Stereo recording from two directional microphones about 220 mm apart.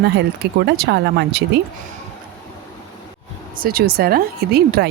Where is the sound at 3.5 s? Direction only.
40° right (ahead or behind).